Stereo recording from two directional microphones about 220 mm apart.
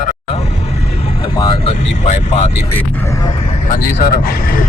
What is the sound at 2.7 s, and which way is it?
Speech, 10° left (ahead or behind).